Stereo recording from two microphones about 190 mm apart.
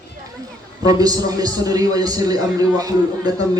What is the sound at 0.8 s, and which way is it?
A man's voice, 20° right (ahead or behind).